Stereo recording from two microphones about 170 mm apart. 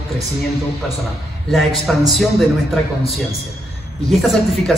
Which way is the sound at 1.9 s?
Centre (ahead or behind).